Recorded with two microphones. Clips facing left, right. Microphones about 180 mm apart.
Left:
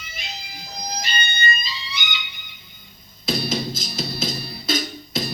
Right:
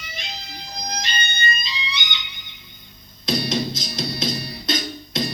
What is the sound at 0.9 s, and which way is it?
Music, 5° left (ahead or behind).